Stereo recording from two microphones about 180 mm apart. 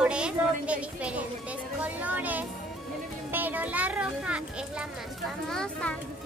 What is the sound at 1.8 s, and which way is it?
A child's voice, 10° right (ahead or behind).